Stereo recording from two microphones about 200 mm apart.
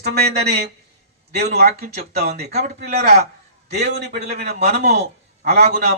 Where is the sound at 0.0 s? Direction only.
55° right (ahead or behind).